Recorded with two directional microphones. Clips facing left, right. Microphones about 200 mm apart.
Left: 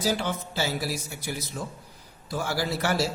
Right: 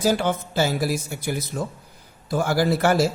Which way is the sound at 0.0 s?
50° right (ahead or behind).